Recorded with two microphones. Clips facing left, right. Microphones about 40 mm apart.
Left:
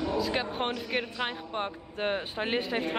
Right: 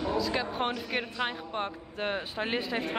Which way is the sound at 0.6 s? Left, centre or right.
Centre.